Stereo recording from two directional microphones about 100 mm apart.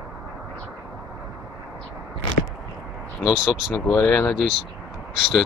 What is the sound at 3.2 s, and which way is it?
Speech, 5° right (ahead or behind).